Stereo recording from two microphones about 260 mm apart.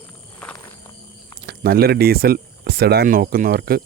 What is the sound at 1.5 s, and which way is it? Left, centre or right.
Speech, right.